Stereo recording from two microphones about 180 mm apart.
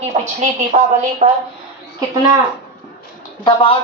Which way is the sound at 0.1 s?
40° right (ahead or behind).